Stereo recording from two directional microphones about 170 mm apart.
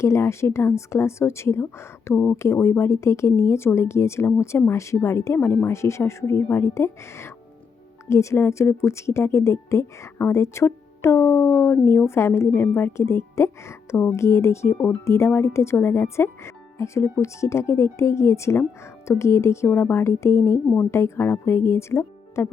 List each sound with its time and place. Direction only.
0.0 s a woman's voice: 15° left (ahead or behind)